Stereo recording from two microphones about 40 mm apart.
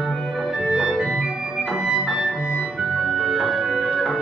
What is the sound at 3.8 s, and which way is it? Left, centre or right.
Music, right.